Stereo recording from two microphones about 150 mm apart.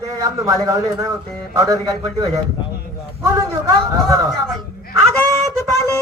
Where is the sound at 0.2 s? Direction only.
20° right (ahead or behind).